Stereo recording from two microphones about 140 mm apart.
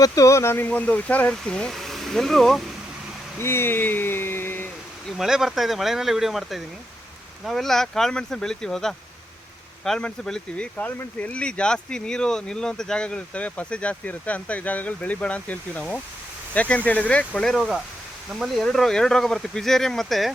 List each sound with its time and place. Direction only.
0.0 s speech: 20° left (ahead or behind); by 2.6 s centre (ahead or behind)
3.3 s speech: 15° left (ahead or behind)
5.1 s speech: 5° right (ahead or behind)